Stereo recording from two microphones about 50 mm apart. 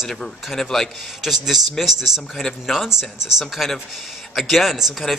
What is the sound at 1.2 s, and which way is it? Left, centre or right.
Speech, centre.